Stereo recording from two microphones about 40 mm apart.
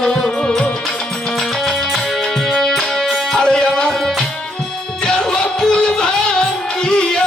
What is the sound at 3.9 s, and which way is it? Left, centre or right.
Tabla, centre.